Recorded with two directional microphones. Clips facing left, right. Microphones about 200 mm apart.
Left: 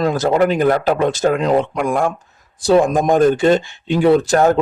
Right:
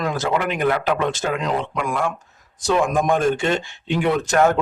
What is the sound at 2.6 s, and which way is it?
Speech, 35° left (ahead or behind).